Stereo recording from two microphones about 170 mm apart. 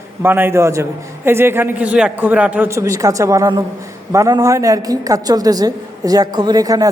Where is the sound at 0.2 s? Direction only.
10° right (ahead or behind).